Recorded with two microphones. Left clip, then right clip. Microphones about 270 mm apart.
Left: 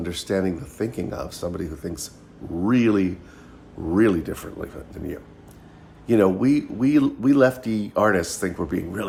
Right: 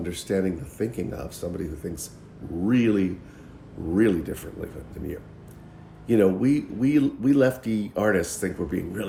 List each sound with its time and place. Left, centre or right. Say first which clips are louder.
0.0 s speech: left 2 dB; centre